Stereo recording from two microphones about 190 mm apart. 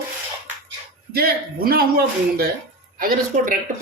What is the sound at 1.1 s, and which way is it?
Speech, 55° right (ahead or behind).